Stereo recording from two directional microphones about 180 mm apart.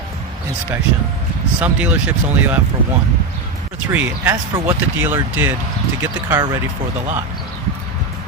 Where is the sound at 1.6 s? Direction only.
10° right (ahead or behind).